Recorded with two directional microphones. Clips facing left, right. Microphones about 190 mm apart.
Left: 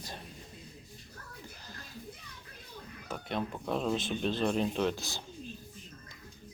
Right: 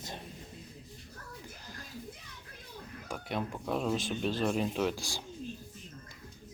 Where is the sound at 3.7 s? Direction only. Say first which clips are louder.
Even; 10° right (ahead or behind).